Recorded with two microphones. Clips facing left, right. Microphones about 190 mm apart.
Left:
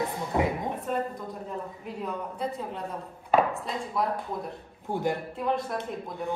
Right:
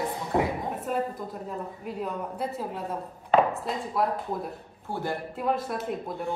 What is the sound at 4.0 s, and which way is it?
Speech, 5° right (ahead or behind).